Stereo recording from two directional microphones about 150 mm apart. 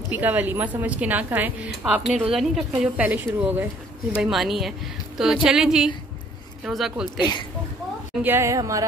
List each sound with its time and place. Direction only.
0.1 s a woman's voice: 10° right (ahead or behind)
7.2 s speech: 30° left (ahead or behind)
8.2 s a woman's voice: 15° right (ahead or behind)